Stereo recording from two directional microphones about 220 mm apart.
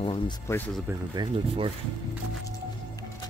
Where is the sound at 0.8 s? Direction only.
20° right (ahead or behind).